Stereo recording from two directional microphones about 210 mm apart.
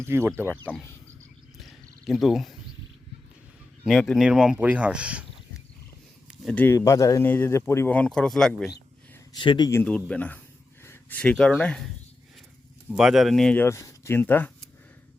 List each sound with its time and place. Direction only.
0.0 s speech: 10° right (ahead or behind)
0.5 s speech: 5° left (ahead or behind)
1.5 s purr: centre (ahead or behind)
3.8 s speech: centre (ahead or behind)
6.2 s speech: 5° left (ahead or behind)
9.3 s speech: 20° left (ahead or behind); by 11.9 s 5° left (ahead or behind)
12.9 s speech: 5° right (ahead or behind)